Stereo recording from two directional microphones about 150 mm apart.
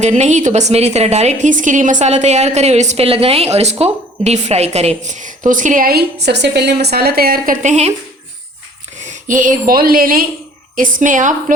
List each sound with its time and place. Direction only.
0.0 s a woman's voice: 50° right (ahead or behind); by 7.5 s 80° right
7.6 s a woman's voice: 50° right (ahead or behind)
9.0 s a woman's voice: 60° right (ahead or behind)